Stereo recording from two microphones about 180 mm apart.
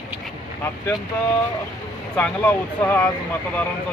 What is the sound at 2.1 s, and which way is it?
Speech, 10° left (ahead or behind).